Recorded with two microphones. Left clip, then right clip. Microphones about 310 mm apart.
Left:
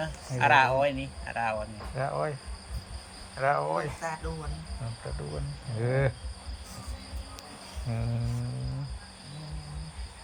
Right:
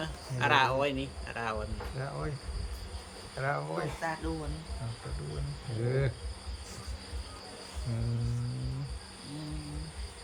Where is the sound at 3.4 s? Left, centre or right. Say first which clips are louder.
Left 7 dB; centre.